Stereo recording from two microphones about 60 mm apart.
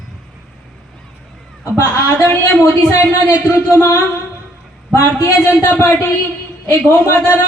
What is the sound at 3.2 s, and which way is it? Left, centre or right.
Speech, left.